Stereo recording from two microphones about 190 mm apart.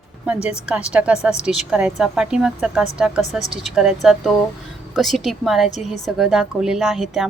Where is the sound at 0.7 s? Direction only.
5° right (ahead or behind).